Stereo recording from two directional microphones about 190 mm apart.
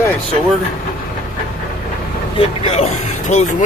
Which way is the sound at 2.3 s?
30° left (ahead or behind).